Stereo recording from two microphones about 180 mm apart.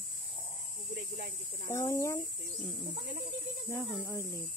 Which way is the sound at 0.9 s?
65° right (ahead or behind).